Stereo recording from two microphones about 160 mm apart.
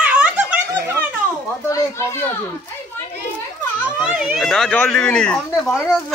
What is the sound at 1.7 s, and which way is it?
Speech, 15° left (ahead or behind).